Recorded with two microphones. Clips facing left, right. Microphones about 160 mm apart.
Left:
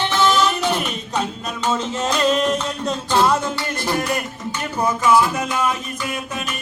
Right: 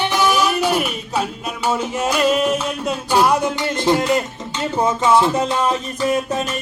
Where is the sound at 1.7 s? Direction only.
10° right (ahead or behind).